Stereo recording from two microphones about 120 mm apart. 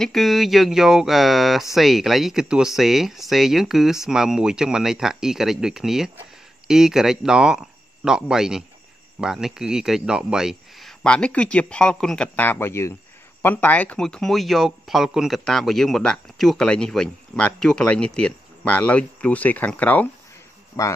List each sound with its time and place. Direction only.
0.0 s speech: centre (ahead or behind)
12.4 s speech: 20° left (ahead or behind)